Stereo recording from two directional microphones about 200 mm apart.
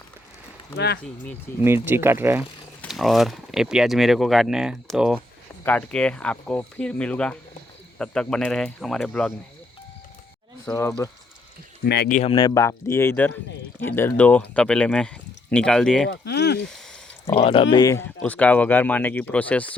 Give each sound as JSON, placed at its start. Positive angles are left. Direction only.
{"t": 1.0, "sound": "speech", "side_deg": 5}
{"t": 1.6, "sound": "speech", "side_deg": -10}
{"t": 2.9, "sound": "speech", "side_deg": 0}
{"t": 10.7, "sound": "speech", "side_deg": 15}
{"t": 11.9, "sound": "speech", "side_deg": 55}
{"t": 12.1, "sound": "speech", "side_deg": 30}
{"t": 12.5, "sound": "speech", "side_deg": 15}
{"t": 16.0, "sound": "speech", "side_deg": 60}
{"t": 17.2, "sound": "speech", "side_deg": 25}
{"t": 18.2, "sound": "speech", "side_deg": 5}